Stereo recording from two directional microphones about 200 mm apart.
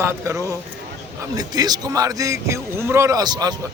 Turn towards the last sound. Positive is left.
turn(degrees=-20)  # may be behind; listen again after turning